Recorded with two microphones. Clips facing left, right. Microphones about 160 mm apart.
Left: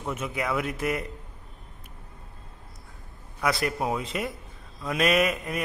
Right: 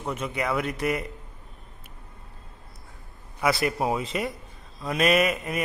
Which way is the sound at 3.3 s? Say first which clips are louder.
Right 2 dB; 5° right (ahead or behind).